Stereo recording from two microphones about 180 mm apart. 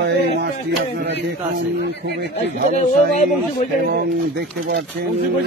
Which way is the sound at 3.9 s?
60° right (ahead or behind).